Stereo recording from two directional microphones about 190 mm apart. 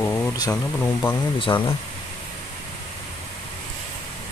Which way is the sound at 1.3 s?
25° left (ahead or behind).